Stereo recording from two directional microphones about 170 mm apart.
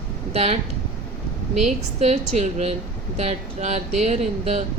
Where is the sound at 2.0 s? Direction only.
40° right (ahead or behind).